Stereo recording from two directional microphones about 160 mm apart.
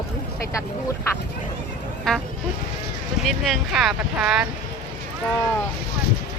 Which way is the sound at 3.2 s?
Centre (ahead or behind).